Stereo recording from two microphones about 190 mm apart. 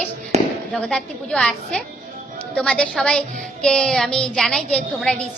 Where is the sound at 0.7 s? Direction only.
5° left (ahead or behind).